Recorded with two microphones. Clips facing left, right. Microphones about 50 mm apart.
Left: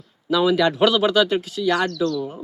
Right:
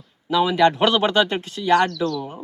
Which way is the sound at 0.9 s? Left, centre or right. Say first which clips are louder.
Left 1 dB; right.